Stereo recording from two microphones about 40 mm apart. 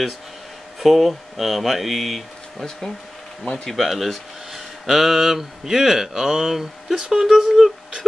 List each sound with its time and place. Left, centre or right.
0.7 s speech: centre
3.6 s speech: centre